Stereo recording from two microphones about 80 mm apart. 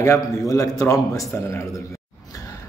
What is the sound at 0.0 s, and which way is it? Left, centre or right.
A man's voice, left.